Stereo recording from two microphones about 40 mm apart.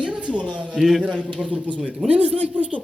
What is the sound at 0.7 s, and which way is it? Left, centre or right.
Speech, centre.